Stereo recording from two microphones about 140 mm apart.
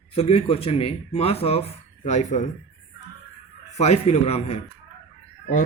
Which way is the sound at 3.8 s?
50° left (ahead or behind).